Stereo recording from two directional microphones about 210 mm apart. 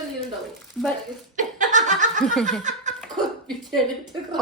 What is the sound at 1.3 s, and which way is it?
Laughter, 35° right (ahead or behind).